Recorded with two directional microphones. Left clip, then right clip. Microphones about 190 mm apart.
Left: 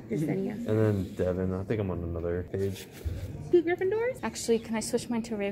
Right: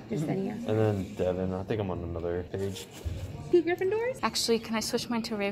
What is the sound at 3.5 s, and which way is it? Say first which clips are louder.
A woman's voice: even; 5° left (ahead or behind).